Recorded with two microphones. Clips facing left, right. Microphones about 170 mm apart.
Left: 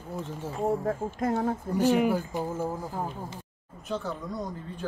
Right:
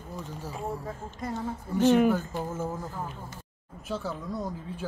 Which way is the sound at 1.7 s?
10° left (ahead or behind).